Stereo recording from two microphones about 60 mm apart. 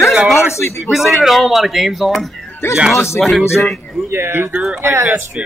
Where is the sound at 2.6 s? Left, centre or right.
Left.